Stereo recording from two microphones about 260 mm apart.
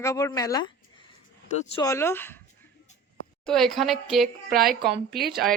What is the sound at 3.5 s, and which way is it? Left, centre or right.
Speech, centre.